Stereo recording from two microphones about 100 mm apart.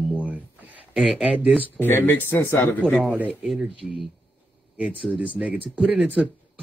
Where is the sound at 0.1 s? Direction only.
15° right (ahead or behind).